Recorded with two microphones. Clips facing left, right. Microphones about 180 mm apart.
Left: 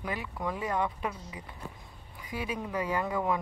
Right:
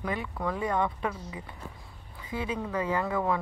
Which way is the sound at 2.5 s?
15° left (ahead or behind).